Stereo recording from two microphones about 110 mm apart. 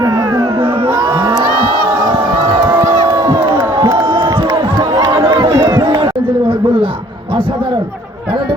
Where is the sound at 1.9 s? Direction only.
35° right (ahead or behind).